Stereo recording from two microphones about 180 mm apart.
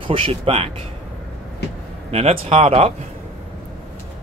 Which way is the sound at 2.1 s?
35° right (ahead or behind).